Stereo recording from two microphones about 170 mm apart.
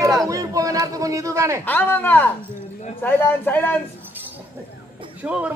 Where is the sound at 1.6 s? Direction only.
10° left (ahead or behind).